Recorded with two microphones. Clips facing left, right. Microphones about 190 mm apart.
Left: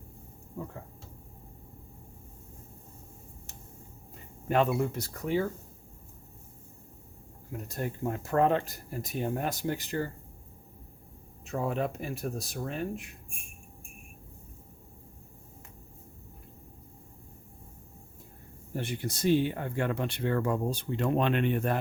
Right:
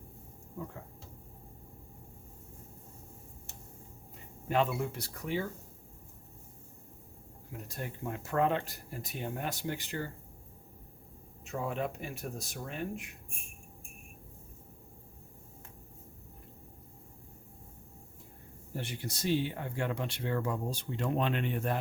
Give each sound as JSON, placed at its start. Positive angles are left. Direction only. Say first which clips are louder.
{"t": 4.4, "sound": "speech", "louder": "left 4 dB", "side_deg": 50}
{"t": 7.8, "sound": "speech", "louder": "left 6 dB", "side_deg": 40}
{"t": 11.6, "sound": "speech", "louder": "left 4 dB", "side_deg": 35}
{"t": 18.8, "sound": "speech", "louder": "left 6 dB", "side_deg": 50}